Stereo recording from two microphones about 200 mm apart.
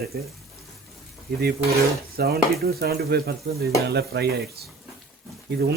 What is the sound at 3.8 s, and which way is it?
Stir, 55° right (ahead or behind).